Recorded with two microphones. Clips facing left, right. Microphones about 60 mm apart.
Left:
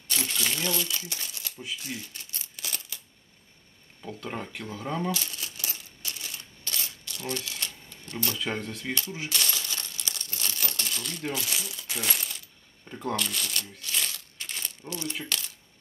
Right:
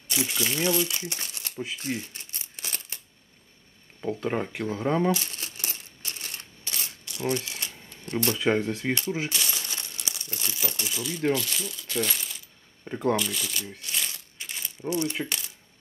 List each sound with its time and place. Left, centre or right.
0.1 s speech: centre
0.6 s crumpling: right
4.0 s a sound: right
6.8 s shuffling cards: right
8.5 s speech: centre
8.8 s speech: right
9.5 s crumpling: right
11.3 s speech: centre
12.1 s coin: centre
12.8 s speech: right
13.1 s speech: centre
14.0 s coin: centre
14.9 s speech: right